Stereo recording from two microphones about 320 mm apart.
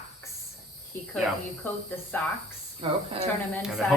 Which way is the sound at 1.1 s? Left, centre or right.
Centre.